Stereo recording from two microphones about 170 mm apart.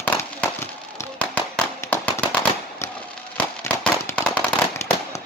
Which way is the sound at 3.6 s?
10° left (ahead or behind).